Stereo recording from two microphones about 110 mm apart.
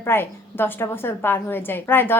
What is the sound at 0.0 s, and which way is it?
A woman's voice, 20° left (ahead or behind).